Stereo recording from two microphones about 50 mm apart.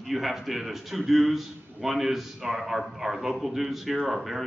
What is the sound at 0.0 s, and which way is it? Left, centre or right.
A man's voice, centre.